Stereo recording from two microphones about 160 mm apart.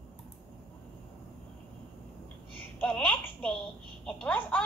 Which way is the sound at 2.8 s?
5° left (ahead or behind).